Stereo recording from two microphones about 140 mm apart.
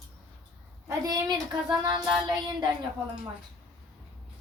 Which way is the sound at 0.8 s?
25° right (ahead or behind).